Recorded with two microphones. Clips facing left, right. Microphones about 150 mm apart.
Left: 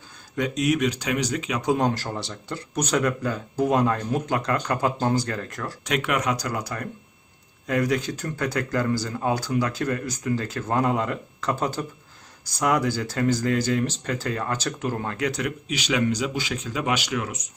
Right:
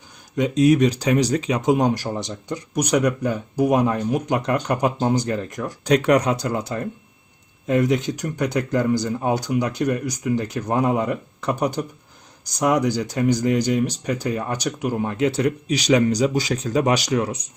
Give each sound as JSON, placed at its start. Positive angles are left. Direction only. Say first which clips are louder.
{"t": 0.3, "sound": "speech", "louder": "right 7 dB", "side_deg": -25}
{"t": 1.6, "sound": "speech", "louder": "right 2 dB", "side_deg": -15}
{"t": 5.8, "sound": "speech", "louder": "right 8 dB", "side_deg": -35}
{"t": 15.3, "sound": "speech", "louder": "right 7 dB", "side_deg": -30}